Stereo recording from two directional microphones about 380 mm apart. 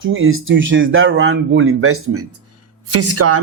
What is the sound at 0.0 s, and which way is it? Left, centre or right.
Speech, right.